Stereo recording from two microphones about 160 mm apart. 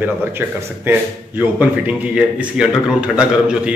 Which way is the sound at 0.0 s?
10° right (ahead or behind).